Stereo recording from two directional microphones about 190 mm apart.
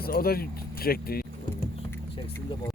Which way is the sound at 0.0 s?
50° left (ahead or behind).